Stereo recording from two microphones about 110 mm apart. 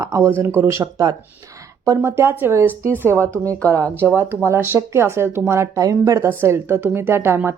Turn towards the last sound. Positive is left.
turn(degrees=-20)  # may be behind; listen again after turning